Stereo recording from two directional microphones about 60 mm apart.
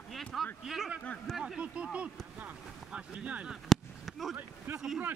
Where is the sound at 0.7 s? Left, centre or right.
Centre.